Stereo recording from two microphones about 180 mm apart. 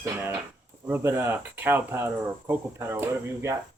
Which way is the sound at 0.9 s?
15° right (ahead or behind).